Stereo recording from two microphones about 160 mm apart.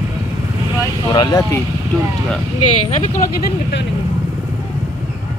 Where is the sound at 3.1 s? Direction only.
75° left (ahead or behind).